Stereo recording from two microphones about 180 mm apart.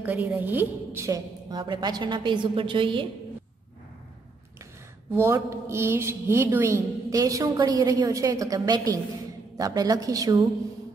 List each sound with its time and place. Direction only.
0.0 s a woman's voice: 10° right (ahead or behind); by 3.1 s 30° right (ahead or behind)
5.1 s a woman's voice: 15° right (ahead or behind)